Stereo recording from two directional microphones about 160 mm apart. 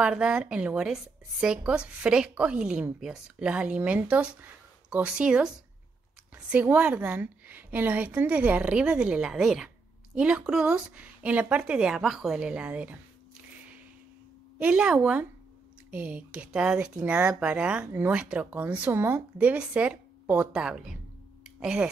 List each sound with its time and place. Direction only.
0.0 s a woman's voice: 5° right (ahead or behind)
6.5 s a woman's voice: 10° right (ahead or behind)
14.6 s a woman's voice: 5° right (ahead or behind)